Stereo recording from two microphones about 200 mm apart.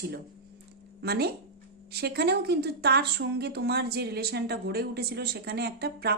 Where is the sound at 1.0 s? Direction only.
50° right (ahead or behind).